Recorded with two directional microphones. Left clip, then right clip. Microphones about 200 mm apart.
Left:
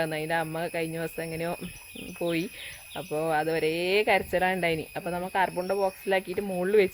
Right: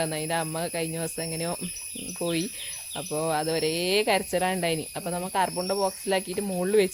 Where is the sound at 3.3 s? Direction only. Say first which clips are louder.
Left 1 dB; centre (ahead or behind).